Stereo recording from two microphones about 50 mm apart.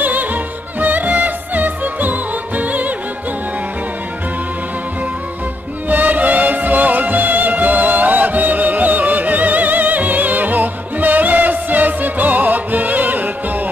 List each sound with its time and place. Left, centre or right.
0.0 s music: right
5.9 s music: right